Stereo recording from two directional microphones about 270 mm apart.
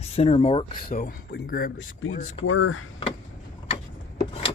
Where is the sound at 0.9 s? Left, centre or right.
Left.